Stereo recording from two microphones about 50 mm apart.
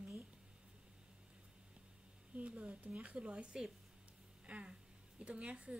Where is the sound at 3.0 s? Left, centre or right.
Right.